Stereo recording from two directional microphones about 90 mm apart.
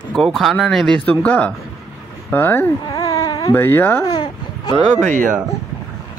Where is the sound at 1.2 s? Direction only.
15° left (ahead or behind).